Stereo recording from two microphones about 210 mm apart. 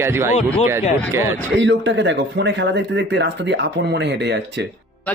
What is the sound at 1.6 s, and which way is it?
Speech, 60° right (ahead or behind).